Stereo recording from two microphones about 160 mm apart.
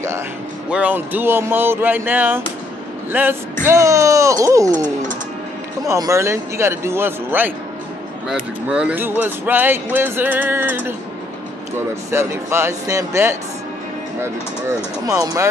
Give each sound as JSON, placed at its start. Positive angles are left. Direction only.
{"t": 0.7, "sound": "music", "side_deg": -10}
{"t": 3.6, "sound": "speech", "side_deg": -20}
{"t": 5.9, "sound": "music", "side_deg": -20}
{"t": 8.6, "sound": "music", "side_deg": -10}
{"t": 15.0, "sound": "speech", "side_deg": -20}